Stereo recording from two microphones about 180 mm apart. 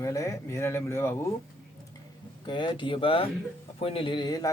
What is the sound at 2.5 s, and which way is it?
A man's voice, 25° left (ahead or behind).